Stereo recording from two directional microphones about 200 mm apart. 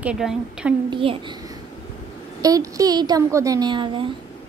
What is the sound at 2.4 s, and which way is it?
A woman's voice, 15° right (ahead or behind).